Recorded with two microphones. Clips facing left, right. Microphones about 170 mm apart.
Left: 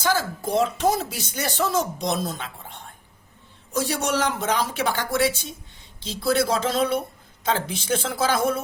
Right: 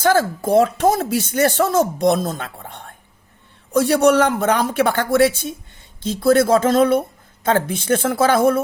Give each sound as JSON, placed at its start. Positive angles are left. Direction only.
{"t": 0.0, "sound": "speech", "side_deg": -55}